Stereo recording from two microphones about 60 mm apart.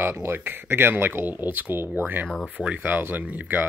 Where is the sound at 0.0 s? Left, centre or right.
Right.